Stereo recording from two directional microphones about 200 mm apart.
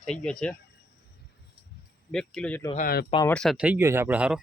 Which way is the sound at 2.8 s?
50° left (ahead or behind).